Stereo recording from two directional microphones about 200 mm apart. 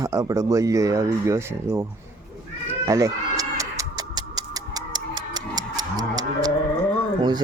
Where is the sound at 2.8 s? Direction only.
15° right (ahead or behind).